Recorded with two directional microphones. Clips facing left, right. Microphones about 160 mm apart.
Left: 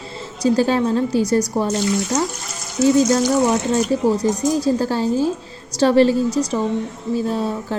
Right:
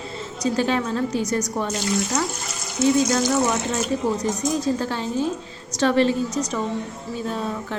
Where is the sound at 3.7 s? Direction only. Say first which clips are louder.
Left 6 dB; 30° left (ahead or behind).